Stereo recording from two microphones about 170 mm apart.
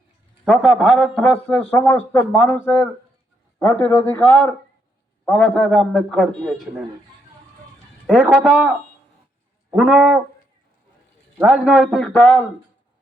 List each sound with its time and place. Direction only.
0.4 s a man's voice: centre (ahead or behind)
3.6 s a man's voice: 15° left (ahead or behind)
8.0 s a man's voice: 5° right (ahead or behind)
9.7 s a man's voice: 5° right (ahead or behind)
11.3 s a man's voice: centre (ahead or behind)